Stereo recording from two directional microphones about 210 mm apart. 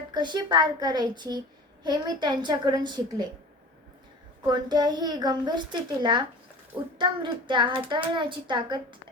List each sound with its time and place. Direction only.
0.1 s a child's voice: 20° right (ahead or behind)
4.4 s a child's voice: 20° right (ahead or behind)